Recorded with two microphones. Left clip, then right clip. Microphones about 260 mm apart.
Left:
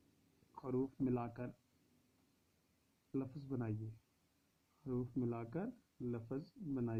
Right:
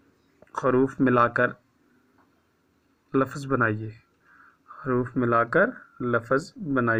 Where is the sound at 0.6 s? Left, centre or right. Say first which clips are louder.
Right 19 dB; right.